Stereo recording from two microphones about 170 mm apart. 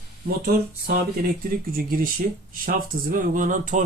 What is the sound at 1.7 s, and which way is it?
Speech, 60° right (ahead or behind).